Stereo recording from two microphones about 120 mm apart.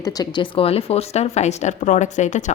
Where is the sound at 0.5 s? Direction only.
55° left (ahead or behind).